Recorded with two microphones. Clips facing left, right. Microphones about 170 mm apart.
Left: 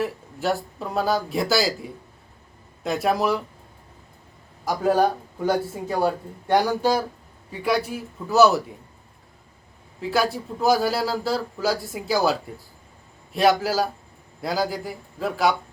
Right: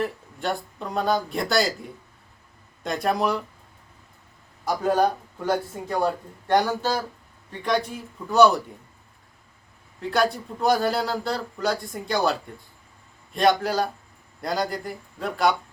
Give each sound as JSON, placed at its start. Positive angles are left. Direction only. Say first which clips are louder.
{"t": 0.0, "sound": "a man's voice", "louder": "left 2 dB", "side_deg": 5}
{"t": 4.6, "sound": "a man's voice", "louder": "left 1 dB", "side_deg": 5}
{"t": 10.0, "sound": "a man's voice", "louder": "even", "side_deg": 5}